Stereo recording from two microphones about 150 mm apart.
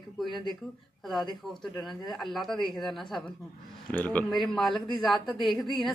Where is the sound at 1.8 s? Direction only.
Centre (ahead or behind).